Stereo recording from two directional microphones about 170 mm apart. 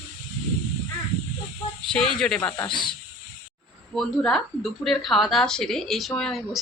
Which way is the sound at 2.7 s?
30° left (ahead or behind).